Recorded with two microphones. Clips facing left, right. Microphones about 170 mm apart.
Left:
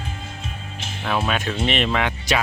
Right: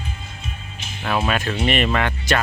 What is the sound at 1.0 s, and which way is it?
Speech, centre (ahead or behind).